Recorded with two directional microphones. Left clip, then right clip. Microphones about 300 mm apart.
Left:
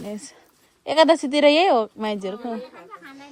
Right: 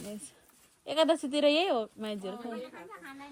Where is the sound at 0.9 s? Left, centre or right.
Left.